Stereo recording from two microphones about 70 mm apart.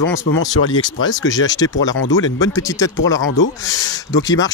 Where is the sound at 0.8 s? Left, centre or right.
Left.